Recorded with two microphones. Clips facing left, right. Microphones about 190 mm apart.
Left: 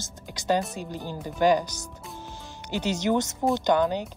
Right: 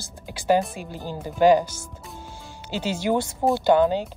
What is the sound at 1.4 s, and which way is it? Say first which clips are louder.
Speech: right 5 dB; 15° right (ahead or behind).